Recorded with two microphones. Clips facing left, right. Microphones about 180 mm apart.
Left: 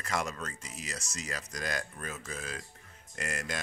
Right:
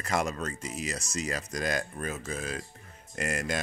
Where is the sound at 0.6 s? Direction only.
15° right (ahead or behind).